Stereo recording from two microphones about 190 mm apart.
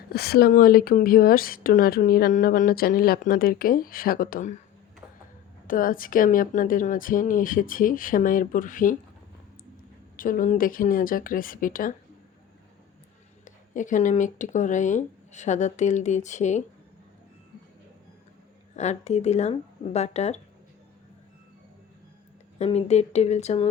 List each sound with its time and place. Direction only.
0.1 s speech: 55° left (ahead or behind)
5.6 s speech: 45° left (ahead or behind)
10.2 s speech: 45° left (ahead or behind)
13.4 s speech: 40° left (ahead or behind)
18.8 s speech: 35° left (ahead or behind)
22.5 s speech: 35° left (ahead or behind)